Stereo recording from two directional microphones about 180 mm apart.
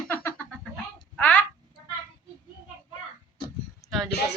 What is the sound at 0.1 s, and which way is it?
Cat, 10° left (ahead or behind).